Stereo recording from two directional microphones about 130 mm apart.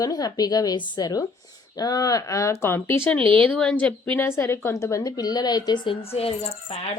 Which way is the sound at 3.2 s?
45° right (ahead or behind).